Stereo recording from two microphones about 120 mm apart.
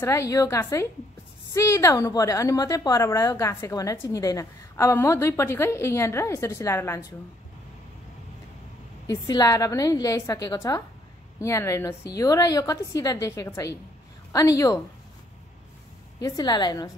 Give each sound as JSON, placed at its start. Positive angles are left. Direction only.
{"t": 0.0, "sound": "a woman's voice", "side_deg": 25}
{"t": 9.0, "sound": "a woman's voice", "side_deg": 30}
{"t": 16.2, "sound": "a woman's voice", "side_deg": 30}